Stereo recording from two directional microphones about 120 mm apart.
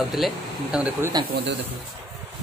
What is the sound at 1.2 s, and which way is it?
Speech, 35° right (ahead or behind).